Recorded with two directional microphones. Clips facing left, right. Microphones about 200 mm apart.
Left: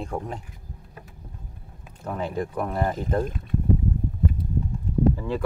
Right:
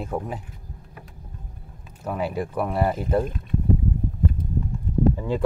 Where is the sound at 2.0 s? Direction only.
5° right (ahead or behind).